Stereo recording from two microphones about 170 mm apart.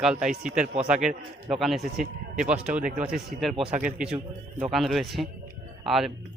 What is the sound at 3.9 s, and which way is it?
Speech, 5° right (ahead or behind).